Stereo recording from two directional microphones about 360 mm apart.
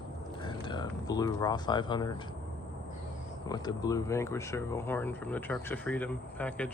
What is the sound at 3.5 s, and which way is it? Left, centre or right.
Speech, centre.